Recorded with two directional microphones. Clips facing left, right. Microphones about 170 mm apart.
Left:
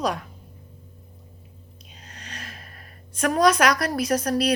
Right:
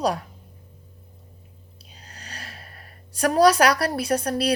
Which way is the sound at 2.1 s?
35° right (ahead or behind).